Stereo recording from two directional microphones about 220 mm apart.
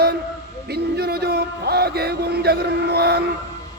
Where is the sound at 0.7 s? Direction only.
45° right (ahead or behind).